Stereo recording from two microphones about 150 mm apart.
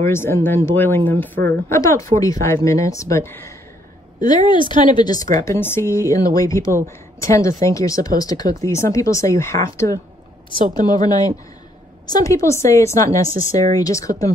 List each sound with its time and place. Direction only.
0.0 s speech: 15° left (ahead or behind)
4.2 s speech: 30° left (ahead or behind)
5.4 s speech: 15° left (ahead or behind)
13.3 s speech: 70° right (ahead or behind)
13.7 s speech: 25° left (ahead or behind)